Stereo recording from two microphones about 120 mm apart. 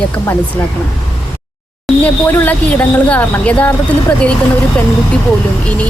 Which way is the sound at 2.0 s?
15° left (ahead or behind).